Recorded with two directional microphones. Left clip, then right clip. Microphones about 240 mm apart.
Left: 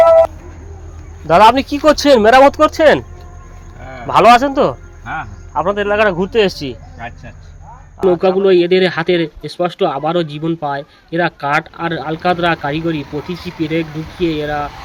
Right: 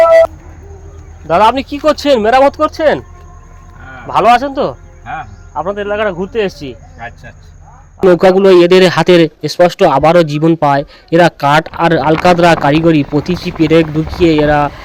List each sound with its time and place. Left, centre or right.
1.3 s speech: centre
4.0 s speech: centre
8.0 s speech: centre
8.4 s speech: right